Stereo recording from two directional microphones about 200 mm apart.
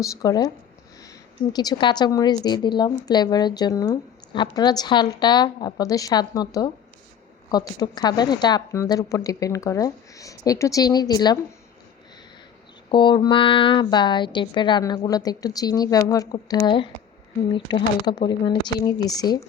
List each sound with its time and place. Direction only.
0.0 s a woman's voice: 15° left (ahead or behind)
12.9 s a woman's voice: 25° left (ahead or behind)